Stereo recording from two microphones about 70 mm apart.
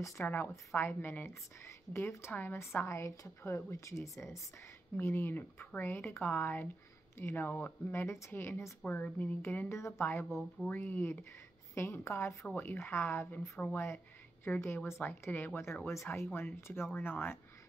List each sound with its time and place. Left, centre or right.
0.2 s a woman's voice: left
2.3 s speech: left
2.6 s a woman's voice: left
4.9 s a woman's voice: left
8.8 s a woman's voice: left
9.8 s a woman's voice: left
10.0 s a woman's voice: left
12.5 s a woman's voice: left